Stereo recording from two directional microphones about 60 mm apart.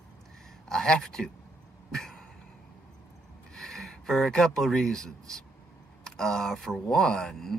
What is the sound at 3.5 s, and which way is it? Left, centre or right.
Speech, centre.